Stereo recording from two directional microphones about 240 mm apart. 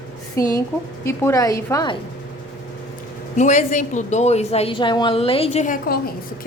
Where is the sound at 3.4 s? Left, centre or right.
Left.